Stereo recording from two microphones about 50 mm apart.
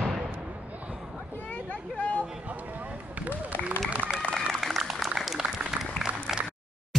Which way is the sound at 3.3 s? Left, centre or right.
Left.